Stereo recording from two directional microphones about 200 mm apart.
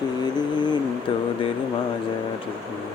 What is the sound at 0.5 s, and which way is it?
Speech, 20° left (ahead or behind).